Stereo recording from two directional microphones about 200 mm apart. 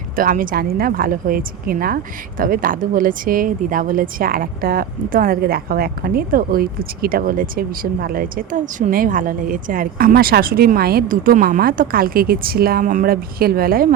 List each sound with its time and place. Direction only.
0.2 s a woman's voice: 45° right (ahead or behind)